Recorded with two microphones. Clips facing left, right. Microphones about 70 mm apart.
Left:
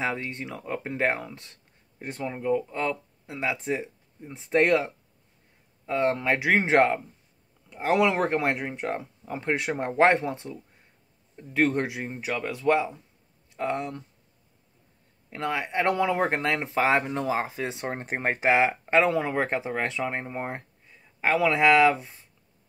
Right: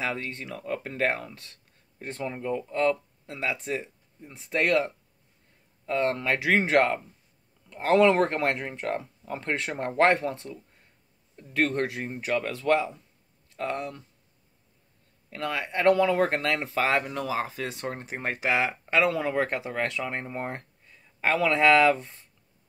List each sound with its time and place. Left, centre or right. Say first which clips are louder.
0.0 s speech: left 2 dB; centre
5.9 s speech: left 1 dB; centre
15.2 s speech: left 2 dB; left